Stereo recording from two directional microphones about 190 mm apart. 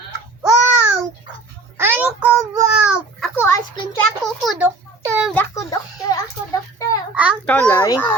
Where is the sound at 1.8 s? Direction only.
10° right (ahead or behind).